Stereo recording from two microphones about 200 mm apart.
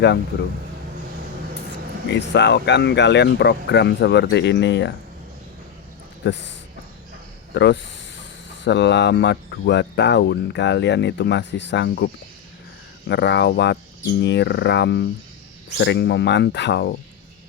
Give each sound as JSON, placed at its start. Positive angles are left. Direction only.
{"t": 2.0, "sound": "speech", "side_deg": 60}
{"t": 6.2, "sound": "speech", "side_deg": 60}
{"t": 7.5, "sound": "speech", "side_deg": 60}